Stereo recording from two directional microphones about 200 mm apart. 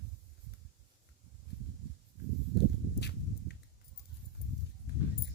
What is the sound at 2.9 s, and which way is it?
Walk, 55° left (ahead or behind).